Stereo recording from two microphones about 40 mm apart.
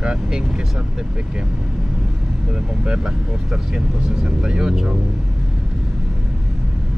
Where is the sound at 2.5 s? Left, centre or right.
Centre.